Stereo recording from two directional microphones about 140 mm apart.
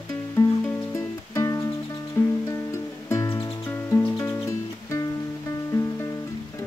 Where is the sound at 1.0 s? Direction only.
20° left (ahead or behind).